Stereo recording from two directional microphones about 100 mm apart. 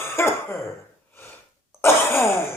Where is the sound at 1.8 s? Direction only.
25° left (ahead or behind).